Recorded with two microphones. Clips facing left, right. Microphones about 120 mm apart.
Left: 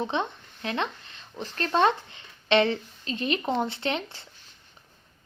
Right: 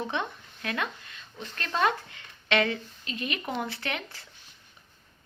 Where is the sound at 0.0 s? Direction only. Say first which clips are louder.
Left 3 dB; 25° left (ahead or behind).